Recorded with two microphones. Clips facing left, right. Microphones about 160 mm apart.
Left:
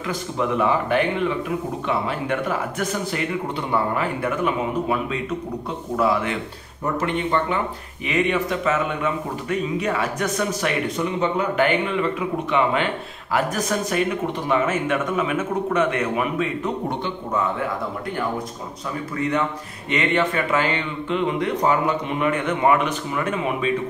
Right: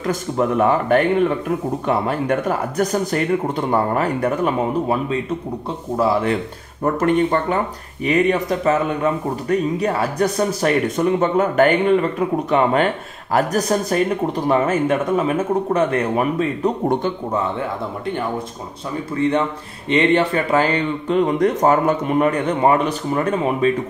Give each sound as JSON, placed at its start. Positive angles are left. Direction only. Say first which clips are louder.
{"t": 0.0, "sound": "speech", "louder": "right 5 dB", "side_deg": -45}
{"t": 6.8, "sound": "speech", "louder": "right 7 dB", "side_deg": -45}
{"t": 11.1, "sound": "speech", "louder": "right 6 dB", "side_deg": -50}
{"t": 19.1, "sound": "speech", "louder": "right 5 dB", "side_deg": -30}